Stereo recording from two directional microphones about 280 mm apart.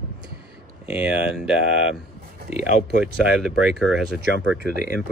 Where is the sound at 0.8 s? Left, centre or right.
Centre.